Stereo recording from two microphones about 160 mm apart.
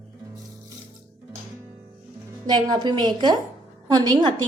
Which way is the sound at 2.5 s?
25° right (ahead or behind).